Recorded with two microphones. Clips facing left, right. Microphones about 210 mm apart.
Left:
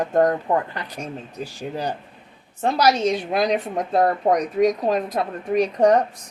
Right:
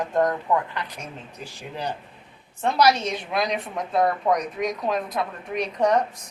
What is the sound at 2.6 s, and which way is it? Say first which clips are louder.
A woman's voice: left 2 dB; 40° left (ahead or behind).